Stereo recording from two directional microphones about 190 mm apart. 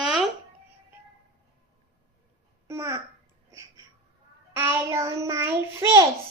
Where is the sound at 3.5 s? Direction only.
15° right (ahead or behind).